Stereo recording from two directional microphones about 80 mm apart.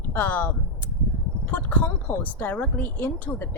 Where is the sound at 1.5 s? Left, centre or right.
Left.